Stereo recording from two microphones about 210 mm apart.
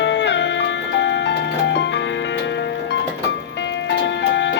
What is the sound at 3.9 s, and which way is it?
Music, 55° left (ahead or behind).